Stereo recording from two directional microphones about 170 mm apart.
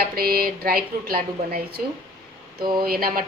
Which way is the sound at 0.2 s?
60° right (ahead or behind).